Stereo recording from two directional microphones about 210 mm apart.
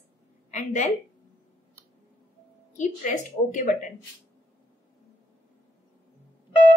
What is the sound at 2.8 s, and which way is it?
A woman's voice, 40° left (ahead or behind).